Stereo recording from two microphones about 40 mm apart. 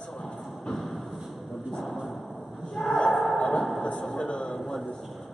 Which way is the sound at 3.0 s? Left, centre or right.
Centre.